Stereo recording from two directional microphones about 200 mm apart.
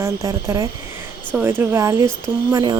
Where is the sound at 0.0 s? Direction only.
15° right (ahead or behind).